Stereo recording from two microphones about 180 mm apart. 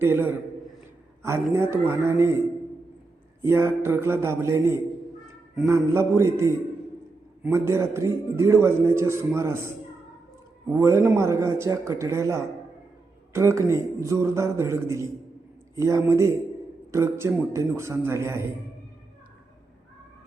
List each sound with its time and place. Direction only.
0.0 s a man's voice: 10° right (ahead or behind)
3.4 s a man's voice: 15° right (ahead or behind)